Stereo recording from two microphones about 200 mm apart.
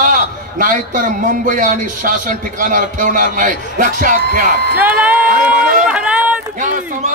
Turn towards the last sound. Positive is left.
turn(degrees=-40)  # may be behind; listen again after turning